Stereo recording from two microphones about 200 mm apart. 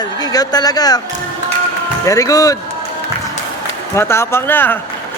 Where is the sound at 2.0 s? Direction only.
15° left (ahead or behind).